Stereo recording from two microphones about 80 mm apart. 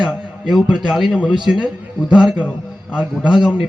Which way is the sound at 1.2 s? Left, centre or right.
Centre.